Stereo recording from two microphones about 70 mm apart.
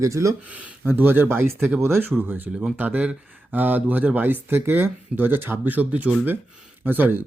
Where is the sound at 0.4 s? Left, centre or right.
Centre.